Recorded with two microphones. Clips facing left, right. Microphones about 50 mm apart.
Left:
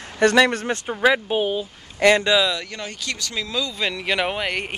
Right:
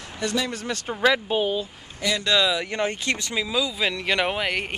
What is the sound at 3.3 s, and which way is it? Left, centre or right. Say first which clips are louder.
Speech: left 1 dB; centre.